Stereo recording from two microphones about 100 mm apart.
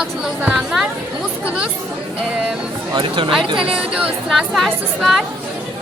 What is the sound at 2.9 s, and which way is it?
Speech, 60° right (ahead or behind).